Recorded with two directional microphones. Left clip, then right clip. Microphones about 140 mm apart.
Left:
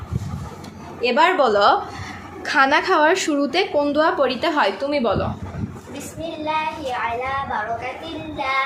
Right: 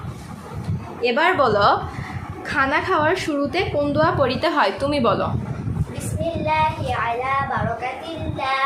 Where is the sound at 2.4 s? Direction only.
25° left (ahead or behind); by 4.7 s 5° left (ahead or behind).